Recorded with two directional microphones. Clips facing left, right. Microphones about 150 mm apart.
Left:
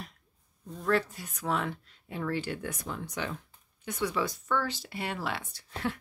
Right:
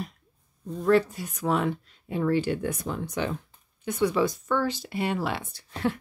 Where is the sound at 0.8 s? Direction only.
15° right (ahead or behind).